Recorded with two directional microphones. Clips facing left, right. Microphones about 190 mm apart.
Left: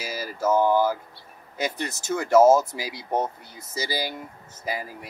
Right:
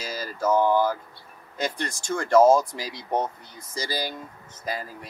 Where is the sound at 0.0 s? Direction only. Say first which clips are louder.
Left 1 dB; 10° left (ahead or behind).